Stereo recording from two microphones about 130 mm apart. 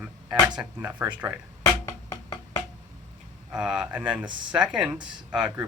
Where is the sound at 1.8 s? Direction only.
25° left (ahead or behind).